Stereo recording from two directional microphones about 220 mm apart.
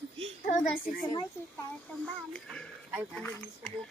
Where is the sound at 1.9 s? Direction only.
5° left (ahead or behind).